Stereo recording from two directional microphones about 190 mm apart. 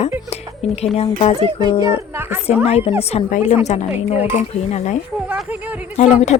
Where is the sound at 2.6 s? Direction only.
30° left (ahead or behind).